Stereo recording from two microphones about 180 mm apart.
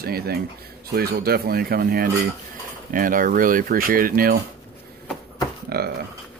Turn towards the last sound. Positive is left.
turn(degrees=-60)  # may be behind; listen again after turning